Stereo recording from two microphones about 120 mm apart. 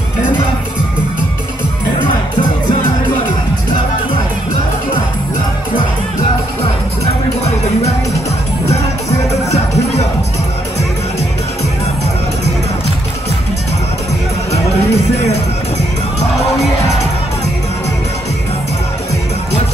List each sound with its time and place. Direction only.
14.5 s music: 60° left (ahead or behind)